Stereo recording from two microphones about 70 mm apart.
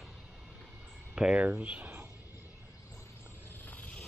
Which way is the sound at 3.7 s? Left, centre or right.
Left.